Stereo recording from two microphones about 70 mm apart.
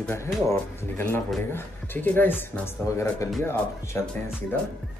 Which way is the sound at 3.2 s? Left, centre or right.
Left.